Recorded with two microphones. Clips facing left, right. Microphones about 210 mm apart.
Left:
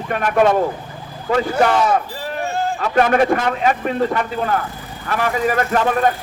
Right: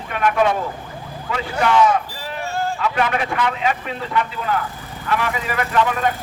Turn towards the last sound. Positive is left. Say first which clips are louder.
# left 3 dB
turn(degrees=45)  # may be behind; listen again after turning